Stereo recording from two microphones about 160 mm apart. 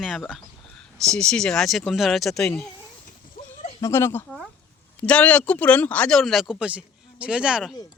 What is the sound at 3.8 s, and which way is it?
Speech, 15° left (ahead or behind).